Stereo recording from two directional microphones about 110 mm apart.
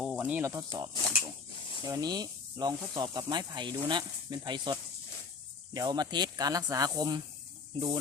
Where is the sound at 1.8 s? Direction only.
35° right (ahead or behind).